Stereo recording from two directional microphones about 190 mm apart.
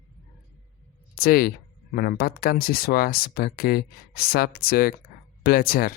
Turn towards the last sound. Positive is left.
turn(degrees=50)  # may be behind; listen again after turning